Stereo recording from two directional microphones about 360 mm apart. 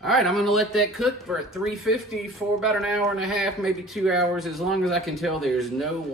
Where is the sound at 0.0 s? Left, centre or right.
Centre.